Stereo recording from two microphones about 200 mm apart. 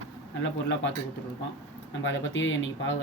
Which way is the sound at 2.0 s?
70° left (ahead or behind).